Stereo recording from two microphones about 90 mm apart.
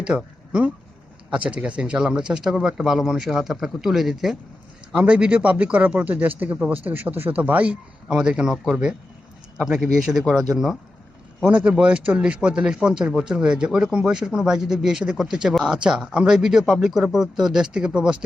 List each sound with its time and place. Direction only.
0.1 s a man's voice: 15° right (ahead or behind)
1.3 s a man's voice: 15° right (ahead or behind)